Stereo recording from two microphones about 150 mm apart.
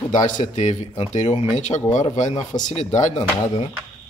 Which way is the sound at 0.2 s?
55° left (ahead or behind).